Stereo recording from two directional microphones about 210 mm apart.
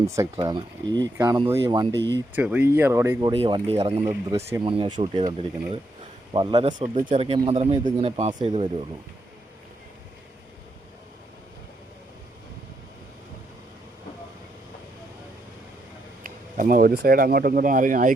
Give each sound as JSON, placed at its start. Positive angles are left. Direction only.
{"t": 0.3, "sound": "speech", "side_deg": -20}
{"t": 2.1, "sound": "speech", "side_deg": -5}
{"t": 6.7, "sound": "speech", "side_deg": -35}
{"t": 16.2, "sound": "speech", "side_deg": -40}